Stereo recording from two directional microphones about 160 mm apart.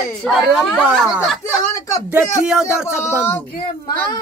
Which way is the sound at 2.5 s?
5° right (ahead or behind).